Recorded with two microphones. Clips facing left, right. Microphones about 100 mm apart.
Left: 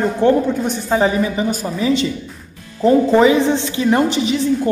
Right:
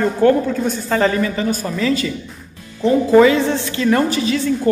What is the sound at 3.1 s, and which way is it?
A woman's voice, 20° left (ahead or behind).